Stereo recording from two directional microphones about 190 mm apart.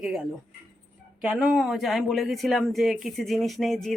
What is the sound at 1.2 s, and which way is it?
Speech, centre (ahead or behind).